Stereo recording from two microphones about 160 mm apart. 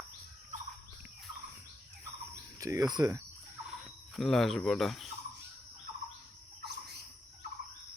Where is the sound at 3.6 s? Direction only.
Centre (ahead or behind).